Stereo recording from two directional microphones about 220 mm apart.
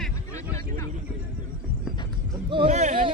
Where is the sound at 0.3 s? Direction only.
15° left (ahead or behind).